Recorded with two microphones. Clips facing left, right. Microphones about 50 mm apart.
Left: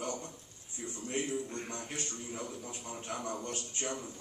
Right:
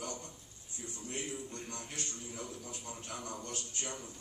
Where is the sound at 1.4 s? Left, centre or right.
Left.